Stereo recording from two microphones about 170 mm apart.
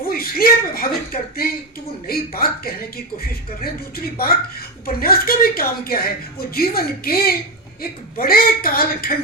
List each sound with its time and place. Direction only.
0.0 s a woman's voice: 60° left (ahead or behind)